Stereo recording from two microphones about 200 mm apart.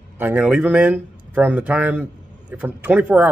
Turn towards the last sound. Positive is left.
turn(degrees=-5)  # may be behind; listen again after turning